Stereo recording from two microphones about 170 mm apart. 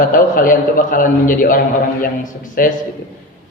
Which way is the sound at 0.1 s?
55° left (ahead or behind).